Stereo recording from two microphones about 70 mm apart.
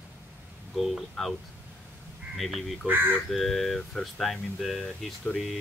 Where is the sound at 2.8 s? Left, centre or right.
Right.